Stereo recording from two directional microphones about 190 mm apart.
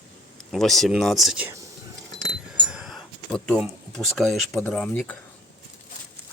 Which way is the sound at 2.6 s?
5° right (ahead or behind).